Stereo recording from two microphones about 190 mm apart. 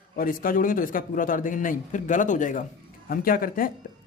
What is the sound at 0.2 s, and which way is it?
A man's voice, 45° left (ahead or behind).